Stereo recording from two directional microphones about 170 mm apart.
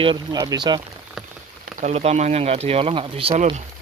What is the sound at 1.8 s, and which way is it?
Speech, 40° right (ahead or behind).